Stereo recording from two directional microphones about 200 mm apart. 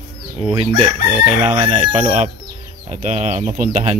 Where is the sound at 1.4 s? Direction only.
35° right (ahead or behind).